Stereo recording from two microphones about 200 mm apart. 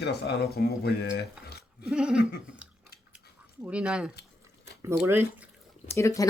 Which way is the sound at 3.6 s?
5° right (ahead or behind).